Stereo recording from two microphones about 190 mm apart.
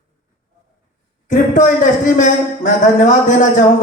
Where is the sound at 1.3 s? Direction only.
40° left (ahead or behind).